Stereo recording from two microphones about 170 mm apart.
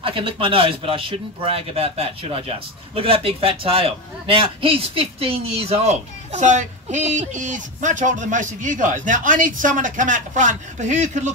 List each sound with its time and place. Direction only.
0.0 s speech: 30° right (ahead or behind)